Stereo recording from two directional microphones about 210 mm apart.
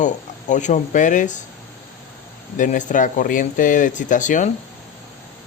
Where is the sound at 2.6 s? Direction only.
40° left (ahead or behind).